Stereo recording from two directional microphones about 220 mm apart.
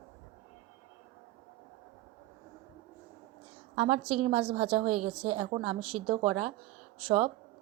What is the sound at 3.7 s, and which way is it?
A woman's voice, 25° right (ahead or behind).